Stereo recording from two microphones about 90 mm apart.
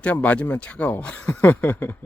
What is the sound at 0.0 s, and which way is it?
Speech, 15° left (ahead or behind).